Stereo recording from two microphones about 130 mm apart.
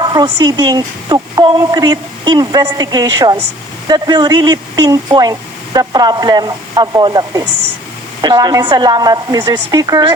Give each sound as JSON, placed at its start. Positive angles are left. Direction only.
{"t": 0.0, "sound": "speech", "side_deg": -35}